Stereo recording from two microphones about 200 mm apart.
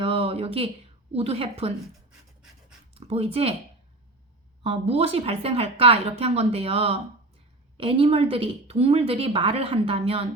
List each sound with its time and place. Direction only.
0.0 s a sound: 30° right (ahead or behind)
1.1 s speech: 30° right (ahead or behind)
2.4 s pant: 5° right (ahead or behind)
2.9 s speech: 30° right (ahead or behind)
4.6 s speech: 30° right (ahead or behind)